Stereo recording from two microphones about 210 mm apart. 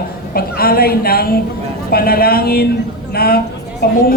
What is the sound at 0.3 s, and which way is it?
A woman's voice, 45° left (ahead or behind).